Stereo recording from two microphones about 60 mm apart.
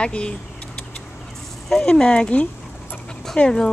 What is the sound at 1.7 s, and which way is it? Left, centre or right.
Speech, centre.